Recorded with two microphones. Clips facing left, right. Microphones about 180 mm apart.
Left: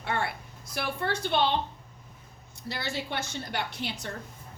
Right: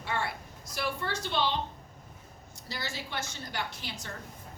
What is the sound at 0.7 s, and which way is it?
Speech, 60° left (ahead or behind).